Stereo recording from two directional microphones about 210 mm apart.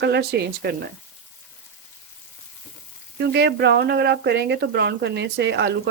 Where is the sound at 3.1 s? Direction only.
50° right (ahead or behind).